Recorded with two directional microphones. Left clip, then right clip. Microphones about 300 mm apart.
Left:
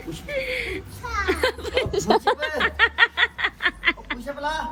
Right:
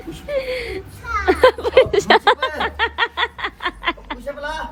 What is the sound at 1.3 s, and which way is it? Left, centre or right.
Children playing, centre.